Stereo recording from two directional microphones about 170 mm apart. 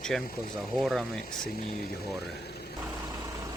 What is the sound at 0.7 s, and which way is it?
Speech, centre (ahead or behind).